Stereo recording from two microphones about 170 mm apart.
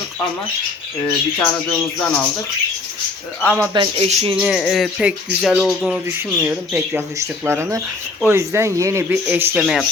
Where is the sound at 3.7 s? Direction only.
25° right (ahead or behind).